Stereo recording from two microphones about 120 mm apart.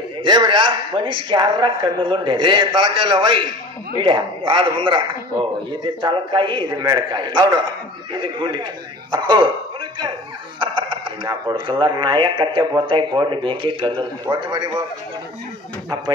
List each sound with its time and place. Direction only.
0.2 s a man's voice: 40° right (ahead or behind)